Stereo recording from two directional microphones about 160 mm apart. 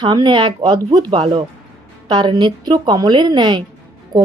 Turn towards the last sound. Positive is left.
turn(degrees=-25)  # may be behind; listen again after turning